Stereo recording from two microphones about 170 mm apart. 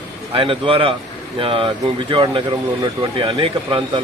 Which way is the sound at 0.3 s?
30° right (ahead or behind).